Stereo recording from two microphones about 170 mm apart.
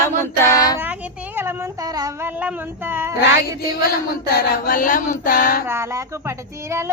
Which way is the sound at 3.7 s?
65° left (ahead or behind).